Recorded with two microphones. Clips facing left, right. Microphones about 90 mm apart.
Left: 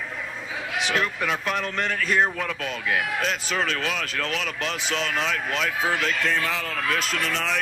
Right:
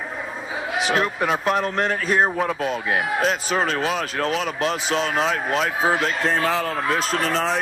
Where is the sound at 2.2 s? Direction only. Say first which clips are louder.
Right 5 dB; 30° right (ahead or behind).